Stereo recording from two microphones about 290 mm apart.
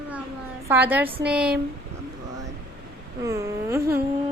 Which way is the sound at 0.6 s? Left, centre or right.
Centre.